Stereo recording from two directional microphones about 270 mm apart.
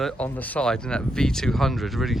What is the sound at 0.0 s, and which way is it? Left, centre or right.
Speech, centre.